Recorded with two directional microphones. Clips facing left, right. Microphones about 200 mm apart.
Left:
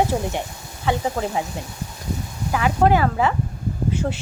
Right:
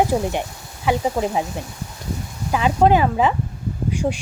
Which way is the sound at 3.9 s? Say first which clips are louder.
Right 3 dB; 15° right (ahead or behind).